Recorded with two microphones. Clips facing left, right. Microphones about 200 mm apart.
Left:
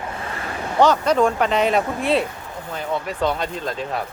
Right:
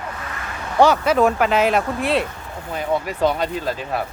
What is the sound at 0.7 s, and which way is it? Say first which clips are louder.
Speech: right 1 dB; 10° right (ahead or behind).